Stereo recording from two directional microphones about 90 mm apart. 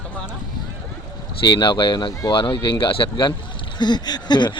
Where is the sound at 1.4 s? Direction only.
60° left (ahead or behind).